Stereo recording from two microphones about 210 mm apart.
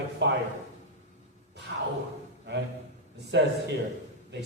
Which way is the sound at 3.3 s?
55° right (ahead or behind).